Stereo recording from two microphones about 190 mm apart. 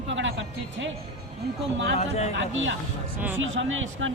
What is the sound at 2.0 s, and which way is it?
Speech, 35° left (ahead or behind).